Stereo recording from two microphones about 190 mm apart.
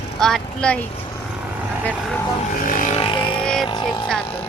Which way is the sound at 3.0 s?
25° left (ahead or behind).